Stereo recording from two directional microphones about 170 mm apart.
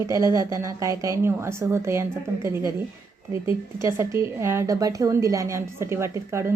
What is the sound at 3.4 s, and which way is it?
Speech, 15° right (ahead or behind).